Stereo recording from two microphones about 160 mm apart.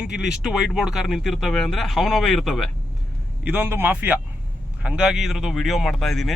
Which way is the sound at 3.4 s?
10° right (ahead or behind).